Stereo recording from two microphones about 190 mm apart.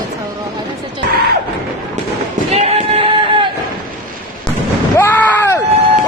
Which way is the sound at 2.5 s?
35° right (ahead or behind).